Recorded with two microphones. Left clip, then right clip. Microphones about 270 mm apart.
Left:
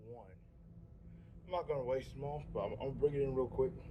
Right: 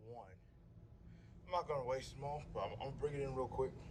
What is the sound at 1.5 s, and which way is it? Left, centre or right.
Speech, right.